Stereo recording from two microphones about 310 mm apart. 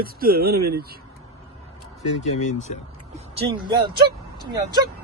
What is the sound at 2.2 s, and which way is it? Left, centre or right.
Speech, left.